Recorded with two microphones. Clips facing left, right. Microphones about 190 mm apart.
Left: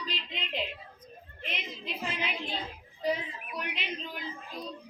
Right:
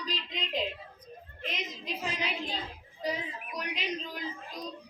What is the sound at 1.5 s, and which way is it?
Speech, 40° right (ahead or behind).